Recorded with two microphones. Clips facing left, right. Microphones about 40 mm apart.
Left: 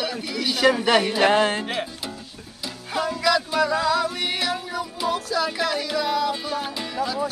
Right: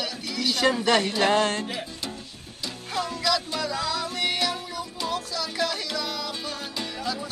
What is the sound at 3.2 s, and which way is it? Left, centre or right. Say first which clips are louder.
Music: left 7 dB; centre.